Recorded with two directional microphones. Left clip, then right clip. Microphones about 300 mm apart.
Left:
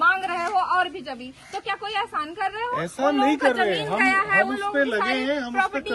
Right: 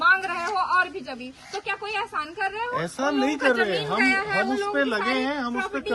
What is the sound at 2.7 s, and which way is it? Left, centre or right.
Speech, right.